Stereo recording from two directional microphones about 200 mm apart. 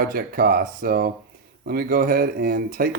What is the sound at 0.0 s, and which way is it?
Speech, 45° right (ahead or behind).